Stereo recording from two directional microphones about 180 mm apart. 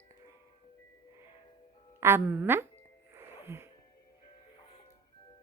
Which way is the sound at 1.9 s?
15° right (ahead or behind).